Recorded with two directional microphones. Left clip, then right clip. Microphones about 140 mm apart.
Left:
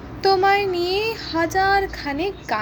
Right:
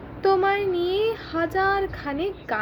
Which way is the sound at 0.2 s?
15° right (ahead or behind).